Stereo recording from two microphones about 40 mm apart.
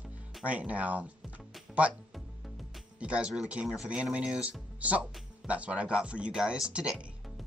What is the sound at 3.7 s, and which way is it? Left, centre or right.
Speech, right.